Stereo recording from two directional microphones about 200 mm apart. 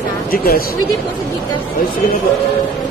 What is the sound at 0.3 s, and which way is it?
Speech, 45° left (ahead or behind).